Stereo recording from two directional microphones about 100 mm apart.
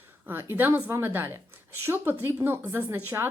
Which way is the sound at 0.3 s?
20° right (ahead or behind).